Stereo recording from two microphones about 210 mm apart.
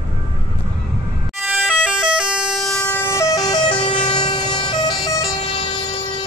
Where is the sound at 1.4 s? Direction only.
5° right (ahead or behind); by 5.6 s 20° left (ahead or behind).